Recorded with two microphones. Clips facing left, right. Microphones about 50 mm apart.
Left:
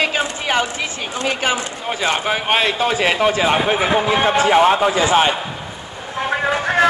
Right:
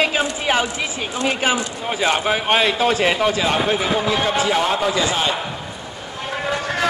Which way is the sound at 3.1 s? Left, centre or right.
Centre.